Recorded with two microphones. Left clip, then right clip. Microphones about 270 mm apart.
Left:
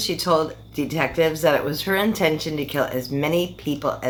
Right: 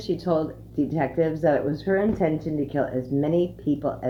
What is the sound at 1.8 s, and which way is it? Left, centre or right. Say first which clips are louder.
Speech: left 2 dB; left.